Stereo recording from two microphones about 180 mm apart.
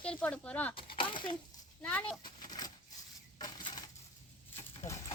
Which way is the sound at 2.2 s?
20° left (ahead or behind).